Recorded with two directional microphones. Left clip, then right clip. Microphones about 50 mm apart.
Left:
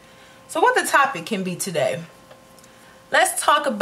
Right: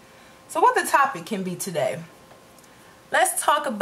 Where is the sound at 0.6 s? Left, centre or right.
Centre.